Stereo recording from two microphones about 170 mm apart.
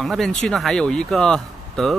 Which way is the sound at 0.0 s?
Centre (ahead or behind).